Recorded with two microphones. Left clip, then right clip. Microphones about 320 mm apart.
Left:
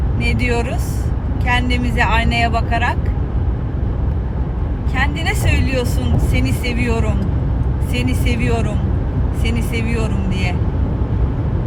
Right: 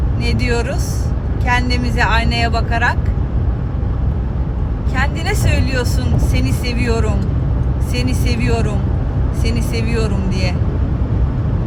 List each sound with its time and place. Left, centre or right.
0.4 s speech: right
4.9 s speech: right
7.9 s speech: right